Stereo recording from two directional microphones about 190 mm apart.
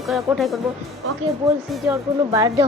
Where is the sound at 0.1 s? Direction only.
Centre (ahead or behind).